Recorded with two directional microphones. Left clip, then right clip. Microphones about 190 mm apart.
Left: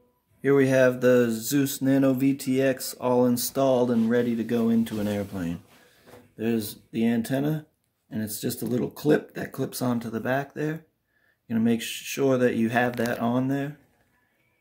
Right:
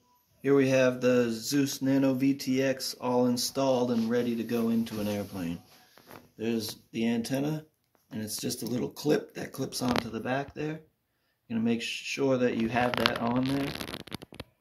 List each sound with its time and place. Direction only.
0.4 s speech: 40° left (ahead or behind)